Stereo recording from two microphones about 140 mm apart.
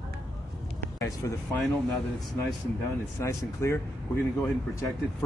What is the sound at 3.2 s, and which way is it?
Speech, 20° left (ahead or behind).